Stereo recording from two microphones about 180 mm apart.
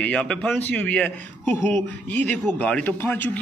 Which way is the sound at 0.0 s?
5° left (ahead or behind).